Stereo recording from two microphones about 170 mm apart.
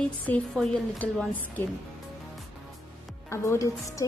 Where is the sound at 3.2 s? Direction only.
15° left (ahead or behind).